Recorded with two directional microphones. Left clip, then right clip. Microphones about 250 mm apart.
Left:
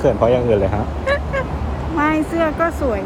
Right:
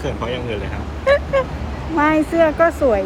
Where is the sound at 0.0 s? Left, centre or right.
Left.